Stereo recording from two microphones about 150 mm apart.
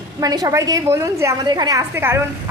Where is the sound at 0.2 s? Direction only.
25° right (ahead or behind).